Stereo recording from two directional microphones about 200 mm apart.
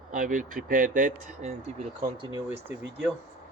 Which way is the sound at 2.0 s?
20° right (ahead or behind).